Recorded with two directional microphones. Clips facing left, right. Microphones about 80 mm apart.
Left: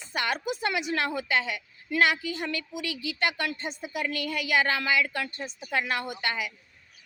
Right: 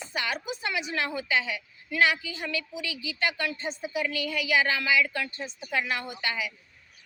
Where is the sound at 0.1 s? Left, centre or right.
Left.